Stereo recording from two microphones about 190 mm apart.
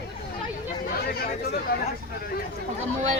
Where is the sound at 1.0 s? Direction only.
55° left (ahead or behind).